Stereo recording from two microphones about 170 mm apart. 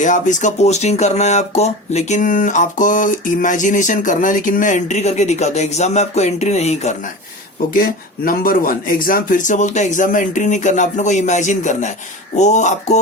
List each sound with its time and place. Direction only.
0.0 s speech: 45° left (ahead or behind)
7.7 s speech: 60° left (ahead or behind)